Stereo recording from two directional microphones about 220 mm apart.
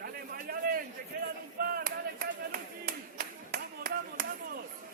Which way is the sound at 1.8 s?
45° right (ahead or behind).